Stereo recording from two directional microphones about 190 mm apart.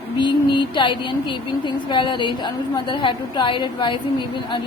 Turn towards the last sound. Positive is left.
turn(degrees=25)  # may be behind; listen again after turning